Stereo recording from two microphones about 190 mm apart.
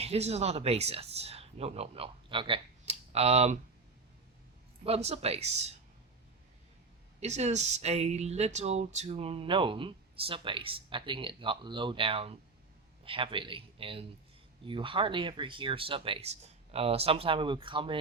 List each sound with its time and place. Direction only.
0.0 s speech: 35° right (ahead or behind)
4.8 s speech: 35° right (ahead or behind)
7.2 s speech: 35° right (ahead or behind)